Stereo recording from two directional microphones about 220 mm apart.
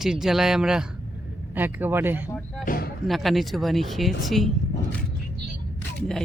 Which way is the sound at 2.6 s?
40° left (ahead or behind).